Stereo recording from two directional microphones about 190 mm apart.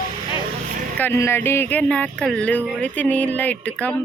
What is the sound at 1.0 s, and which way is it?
Speech, 15° left (ahead or behind).